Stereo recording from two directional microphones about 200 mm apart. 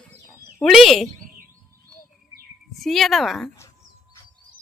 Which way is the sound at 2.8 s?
Centre (ahead or behind).